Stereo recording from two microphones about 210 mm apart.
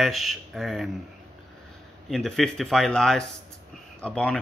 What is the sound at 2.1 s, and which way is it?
Speech, centre (ahead or behind).